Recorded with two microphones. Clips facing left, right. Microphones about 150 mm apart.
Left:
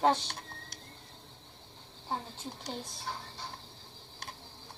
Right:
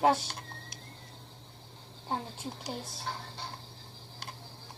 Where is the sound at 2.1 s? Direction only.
10° right (ahead or behind).